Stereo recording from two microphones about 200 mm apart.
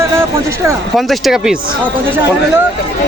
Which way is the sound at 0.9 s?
Centre (ahead or behind).